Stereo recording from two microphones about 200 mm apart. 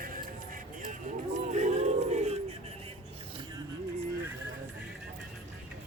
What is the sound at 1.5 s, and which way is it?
Crowd, 35° right (ahead or behind).